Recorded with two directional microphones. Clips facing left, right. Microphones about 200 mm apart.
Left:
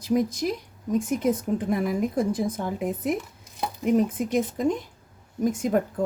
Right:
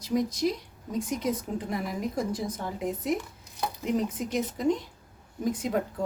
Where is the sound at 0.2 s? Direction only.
50° left (ahead or behind).